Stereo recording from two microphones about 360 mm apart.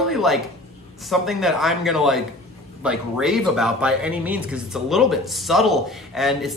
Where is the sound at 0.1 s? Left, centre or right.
Centre.